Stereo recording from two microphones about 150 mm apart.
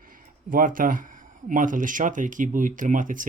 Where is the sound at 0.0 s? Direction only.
65° right (ahead or behind).